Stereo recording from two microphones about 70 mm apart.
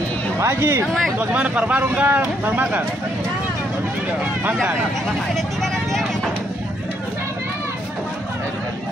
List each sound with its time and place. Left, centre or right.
0.4 s speech: right
5.3 s vehicle: centre